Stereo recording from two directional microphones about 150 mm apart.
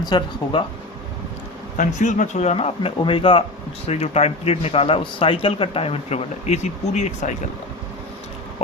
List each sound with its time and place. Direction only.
0.0 s speech: 30° left (ahead or behind)
1.7 s speech: 55° left (ahead or behind)